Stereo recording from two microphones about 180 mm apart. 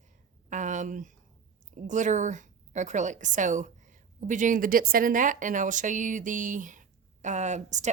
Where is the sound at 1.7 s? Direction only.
45° right (ahead or behind).